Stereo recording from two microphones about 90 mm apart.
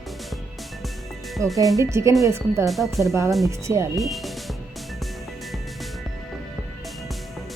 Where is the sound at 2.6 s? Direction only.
Centre (ahead or behind).